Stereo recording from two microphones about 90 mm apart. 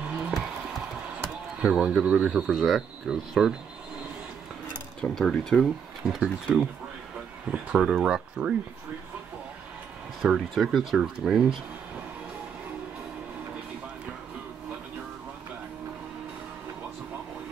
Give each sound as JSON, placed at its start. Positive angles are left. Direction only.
{"t": 0.3, "sound": "music", "side_deg": -5}
{"t": 1.6, "sound": "speech", "side_deg": -10}
{"t": 5.0, "sound": "speech", "side_deg": 5}
{"t": 10.2, "sound": "speech", "side_deg": -5}